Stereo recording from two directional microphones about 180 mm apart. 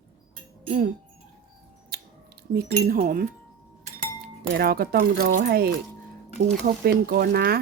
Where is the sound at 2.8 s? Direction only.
45° right (ahead or behind).